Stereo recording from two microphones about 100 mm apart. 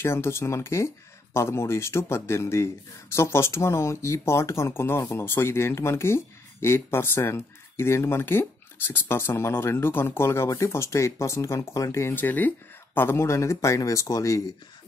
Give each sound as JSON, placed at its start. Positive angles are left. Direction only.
{"t": 0.0, "sound": "speech", "side_deg": 25}